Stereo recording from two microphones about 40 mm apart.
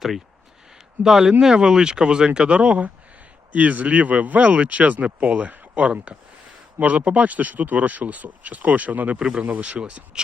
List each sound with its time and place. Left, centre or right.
1.0 s speech: centre
1.3 s speech: centre
3.5 s speech: right